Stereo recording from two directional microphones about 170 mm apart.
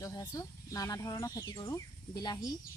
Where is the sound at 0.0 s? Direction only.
20° left (ahead or behind).